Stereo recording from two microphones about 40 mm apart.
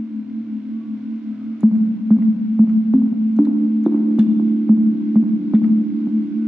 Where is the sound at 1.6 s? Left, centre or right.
Centre.